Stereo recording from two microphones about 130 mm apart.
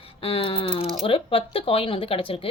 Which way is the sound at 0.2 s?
45° left (ahead or behind).